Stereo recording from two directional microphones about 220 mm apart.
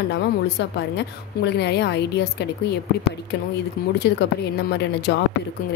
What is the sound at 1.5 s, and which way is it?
A woman's voice, 50° left (ahead or behind).